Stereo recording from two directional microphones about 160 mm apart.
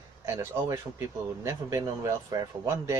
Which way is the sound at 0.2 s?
20° right (ahead or behind).